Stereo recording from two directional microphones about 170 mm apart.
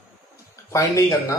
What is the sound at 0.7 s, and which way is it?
Speech, 20° left (ahead or behind).